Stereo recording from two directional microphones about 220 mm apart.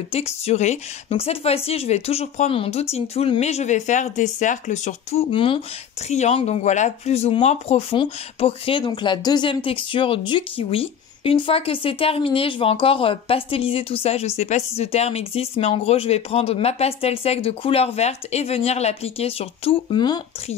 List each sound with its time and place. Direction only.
0.1 s speech: 30° left (ahead or behind)